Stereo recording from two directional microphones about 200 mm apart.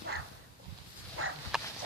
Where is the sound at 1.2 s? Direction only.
90° right.